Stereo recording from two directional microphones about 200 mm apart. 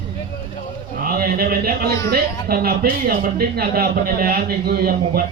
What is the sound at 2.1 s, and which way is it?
A woman's voice, 50° right (ahead or behind).